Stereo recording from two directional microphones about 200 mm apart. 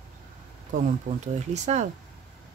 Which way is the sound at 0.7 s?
35° right (ahead or behind).